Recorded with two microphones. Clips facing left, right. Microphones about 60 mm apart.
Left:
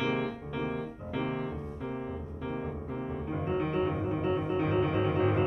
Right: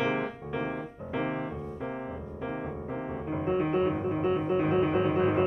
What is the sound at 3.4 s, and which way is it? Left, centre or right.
Music, right.